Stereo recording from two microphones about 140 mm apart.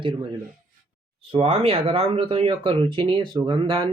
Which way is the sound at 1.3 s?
45° right (ahead or behind).